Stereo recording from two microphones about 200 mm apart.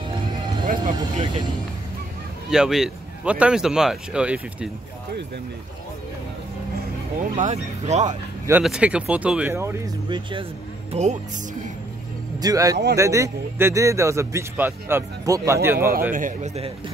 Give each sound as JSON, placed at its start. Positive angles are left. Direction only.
{"t": 0.7, "sound": "speech", "side_deg": -40}
{"t": 2.5, "sound": "speech", "side_deg": 0}
{"t": 7.3, "sound": "speech", "side_deg": -35}
{"t": 8.5, "sound": "a man's voice", "side_deg": -5}
{"t": 10.9, "sound": "speech", "side_deg": -35}
{"t": 12.4, "sound": "a man's voice", "side_deg": -20}
{"t": 16.1, "sound": "speech", "side_deg": -40}